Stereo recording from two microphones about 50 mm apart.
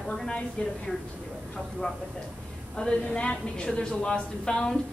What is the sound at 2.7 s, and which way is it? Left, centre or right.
A woman's voice, centre.